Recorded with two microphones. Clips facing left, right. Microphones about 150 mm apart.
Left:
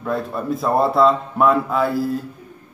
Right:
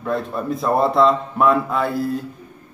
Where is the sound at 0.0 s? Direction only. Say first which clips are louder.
Even; centre (ahead or behind).